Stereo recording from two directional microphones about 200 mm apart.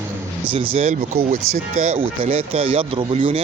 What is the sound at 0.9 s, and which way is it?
Speech, 40° right (ahead or behind).